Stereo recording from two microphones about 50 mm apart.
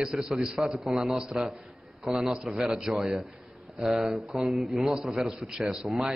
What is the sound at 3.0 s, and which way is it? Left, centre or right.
Speech, right.